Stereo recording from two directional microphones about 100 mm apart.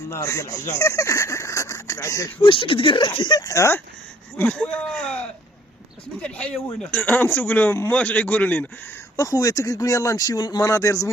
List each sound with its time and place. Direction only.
0.1 s speech: 30° left (ahead or behind)
2.4 s speech: 60° left (ahead or behind); by 3.8 s 30° left (ahead or behind)
4.4 s speech: 10° left (ahead or behind)
6.2 s speech: 10° left (ahead or behind)
9.1 s speech: 35° left (ahead or behind)
10.6 s speech: 30° left (ahead or behind)